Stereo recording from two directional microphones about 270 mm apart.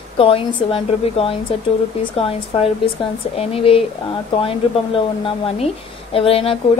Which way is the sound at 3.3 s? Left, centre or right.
Left.